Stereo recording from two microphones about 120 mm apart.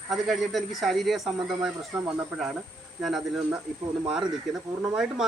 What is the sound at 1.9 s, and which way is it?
Speech, 25° right (ahead or behind).